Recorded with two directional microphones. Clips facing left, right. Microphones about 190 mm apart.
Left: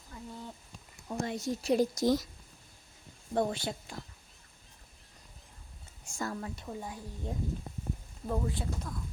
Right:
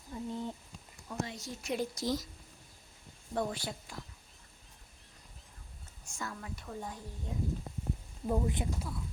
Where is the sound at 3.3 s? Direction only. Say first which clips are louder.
Left 4 dB; 25° left (ahead or behind).